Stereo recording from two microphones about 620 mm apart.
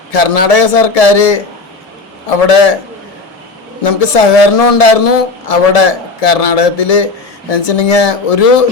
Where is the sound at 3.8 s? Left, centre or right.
Left.